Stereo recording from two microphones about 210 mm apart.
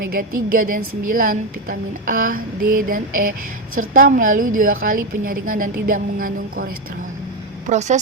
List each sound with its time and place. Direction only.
0.1 s a woman's voice: 40° right (ahead or behind)
7.7 s a woman's voice: 35° right (ahead or behind)